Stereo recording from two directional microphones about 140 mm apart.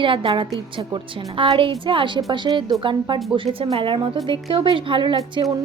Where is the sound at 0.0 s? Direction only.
40° right (ahead or behind).